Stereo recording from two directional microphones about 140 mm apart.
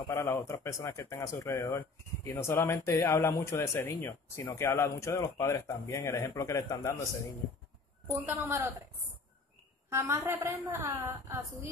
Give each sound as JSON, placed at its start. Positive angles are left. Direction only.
{"t": 0.1, "sound": "speech", "side_deg": 20}
{"t": 8.1, "sound": "a woman's voice", "side_deg": -15}
{"t": 9.8, "sound": "a woman's voice", "side_deg": -20}